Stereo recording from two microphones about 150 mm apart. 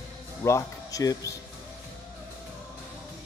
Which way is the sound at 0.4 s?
20° left (ahead or behind).